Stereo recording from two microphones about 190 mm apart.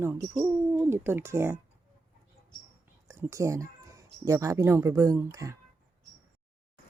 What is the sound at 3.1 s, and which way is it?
Speech, 15° right (ahead or behind).